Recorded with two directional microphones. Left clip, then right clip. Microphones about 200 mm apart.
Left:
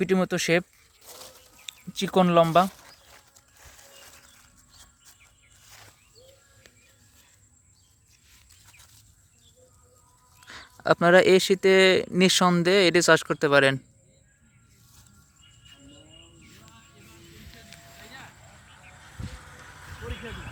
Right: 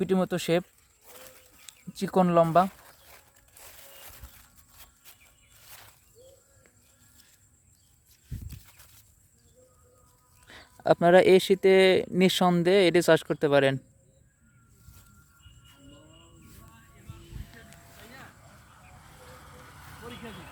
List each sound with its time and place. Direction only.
0.0 s speech: 5° left (ahead or behind)
1.9 s speech: 5° left (ahead or behind)
10.4 s speech: 5° right (ahead or behind)
19.5 s a sound: 55° right (ahead or behind)